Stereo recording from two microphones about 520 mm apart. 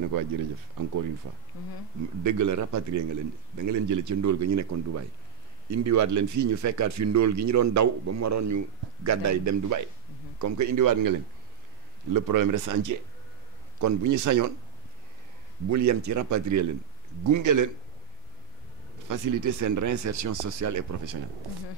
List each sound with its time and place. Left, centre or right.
0.1 s speech: right
2.2 s speech: right
15.7 s speech: right
19.0 s speech: right